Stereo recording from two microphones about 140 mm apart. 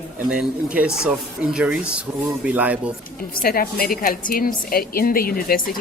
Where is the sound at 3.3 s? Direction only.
90° left.